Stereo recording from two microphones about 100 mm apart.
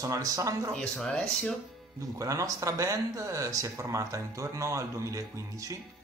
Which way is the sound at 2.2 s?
35° right (ahead or behind).